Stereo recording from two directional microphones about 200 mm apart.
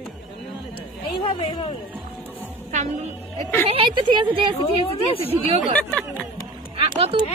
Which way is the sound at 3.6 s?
25° right (ahead or behind).